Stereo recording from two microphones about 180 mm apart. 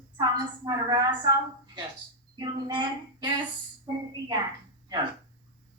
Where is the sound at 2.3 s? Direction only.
25° right (ahead or behind).